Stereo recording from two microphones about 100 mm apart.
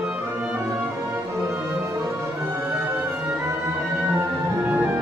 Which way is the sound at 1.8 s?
30° right (ahead or behind).